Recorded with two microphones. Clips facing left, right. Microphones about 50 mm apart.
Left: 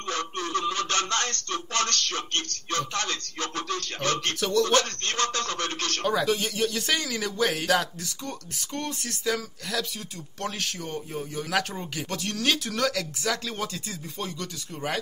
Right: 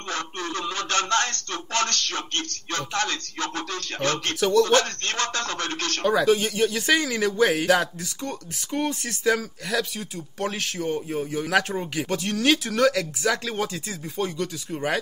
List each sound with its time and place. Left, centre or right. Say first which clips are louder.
0.1 s speech: left 1 dB; right
4.4 s speech: right 6 dB; centre
4.6 s speech: right 3 dB; right
6.0 s speech: right 5 dB; centre